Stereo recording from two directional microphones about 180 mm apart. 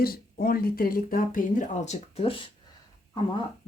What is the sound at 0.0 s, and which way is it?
Speech, 55° left (ahead or behind).